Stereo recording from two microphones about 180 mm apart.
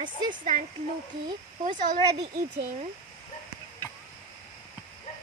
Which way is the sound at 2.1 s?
65° right (ahead or behind).